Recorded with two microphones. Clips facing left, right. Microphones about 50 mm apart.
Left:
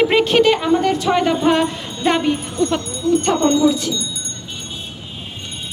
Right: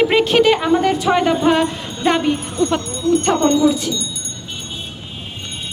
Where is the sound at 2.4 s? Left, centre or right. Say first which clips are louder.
Right 1 dB; right.